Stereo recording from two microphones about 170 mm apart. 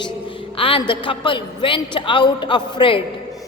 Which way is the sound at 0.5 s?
30° left (ahead or behind).